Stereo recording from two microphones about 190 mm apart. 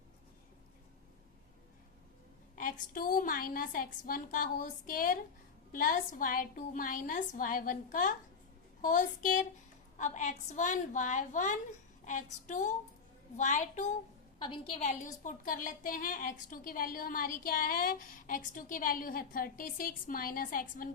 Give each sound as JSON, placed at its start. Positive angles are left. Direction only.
{"t": 2.6, "sound": "a woman's voice", "side_deg": 45}
{"t": 14.4, "sound": "a woman's voice", "side_deg": 25}
{"t": 15.2, "sound": "a woman's voice", "side_deg": 45}